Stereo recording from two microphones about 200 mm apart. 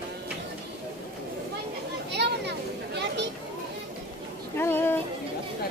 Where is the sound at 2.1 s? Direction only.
55° right (ahead or behind).